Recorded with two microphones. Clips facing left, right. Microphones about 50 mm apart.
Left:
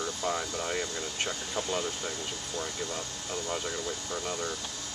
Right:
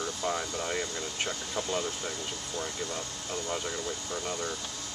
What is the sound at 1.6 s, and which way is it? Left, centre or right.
Speech, centre.